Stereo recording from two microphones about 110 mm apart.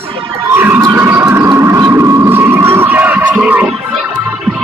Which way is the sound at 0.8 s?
20° right (ahead or behind).